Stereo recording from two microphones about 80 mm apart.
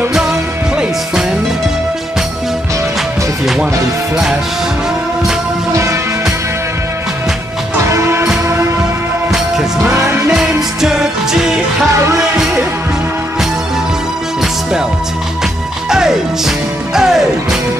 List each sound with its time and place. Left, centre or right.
7.8 s music: right
9.3 s music: centre
9.9 s music: right
10.3 s music: centre
15.9 s music: centre